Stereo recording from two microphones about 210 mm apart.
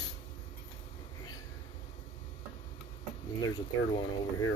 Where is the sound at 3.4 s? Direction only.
20° left (ahead or behind).